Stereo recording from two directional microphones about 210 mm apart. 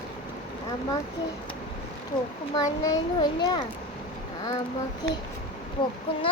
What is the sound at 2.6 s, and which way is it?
A child's voice, 20° left (ahead or behind).